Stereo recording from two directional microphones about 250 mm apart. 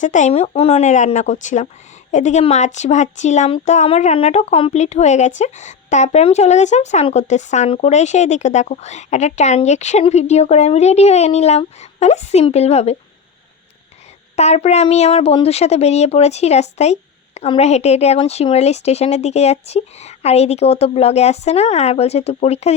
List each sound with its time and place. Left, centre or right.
0.0 s speech: left
14.3 s speech: left